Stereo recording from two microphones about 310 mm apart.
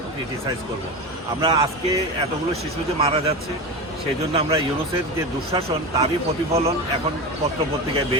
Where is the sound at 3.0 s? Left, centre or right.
Centre.